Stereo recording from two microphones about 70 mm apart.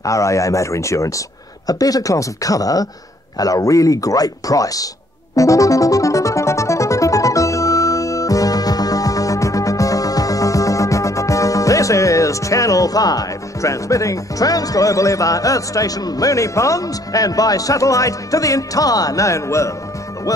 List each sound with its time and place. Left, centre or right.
0.0 s speech: left
1.7 s a man's voice: left
5.3 s music: left
20.3 s a man's voice: left